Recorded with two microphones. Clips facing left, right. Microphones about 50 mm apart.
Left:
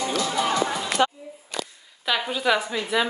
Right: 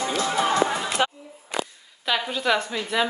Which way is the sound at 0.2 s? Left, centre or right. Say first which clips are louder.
Right 3 dB; right.